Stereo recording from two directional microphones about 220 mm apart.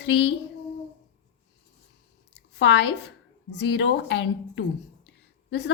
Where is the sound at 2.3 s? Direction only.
55° left (ahead or behind).